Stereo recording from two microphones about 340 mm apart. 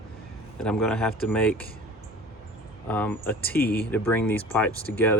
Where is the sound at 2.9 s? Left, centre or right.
Centre.